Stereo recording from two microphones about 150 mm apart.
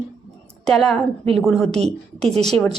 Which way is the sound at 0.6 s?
5° left (ahead or behind).